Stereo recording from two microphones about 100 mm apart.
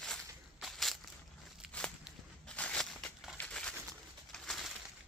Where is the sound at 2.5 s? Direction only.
10° left (ahead or behind).